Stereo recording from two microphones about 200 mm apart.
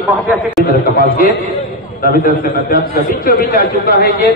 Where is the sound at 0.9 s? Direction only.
45° left (ahead or behind).